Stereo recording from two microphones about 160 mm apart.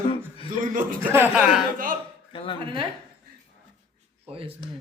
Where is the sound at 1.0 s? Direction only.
10° right (ahead or behind).